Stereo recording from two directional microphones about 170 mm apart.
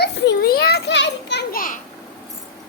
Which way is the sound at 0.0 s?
70° left (ahead or behind).